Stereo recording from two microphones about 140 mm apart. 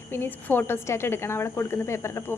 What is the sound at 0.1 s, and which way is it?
A woman's voice, 15° left (ahead or behind).